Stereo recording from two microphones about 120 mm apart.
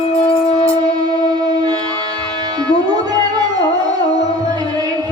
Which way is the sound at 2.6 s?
35° right (ahead or behind).